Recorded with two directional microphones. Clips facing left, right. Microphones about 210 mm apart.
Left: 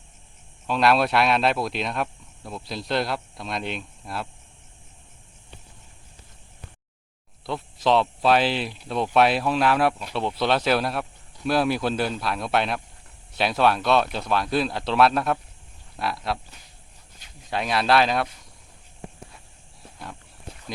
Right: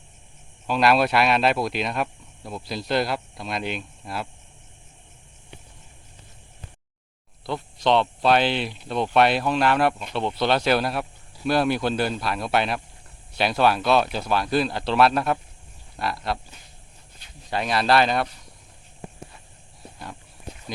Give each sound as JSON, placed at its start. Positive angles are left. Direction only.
{"t": 0.7, "sound": "speech", "side_deg": 0}
{"t": 7.4, "sound": "speech", "side_deg": 0}
{"t": 17.5, "sound": "speech", "side_deg": 0}
{"t": 20.0, "sound": "a sound", "side_deg": 0}